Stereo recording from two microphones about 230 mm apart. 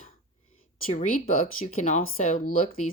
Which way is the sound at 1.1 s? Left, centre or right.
Left.